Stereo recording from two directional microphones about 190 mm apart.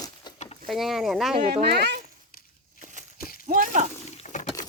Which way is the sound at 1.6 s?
60° right (ahead or behind).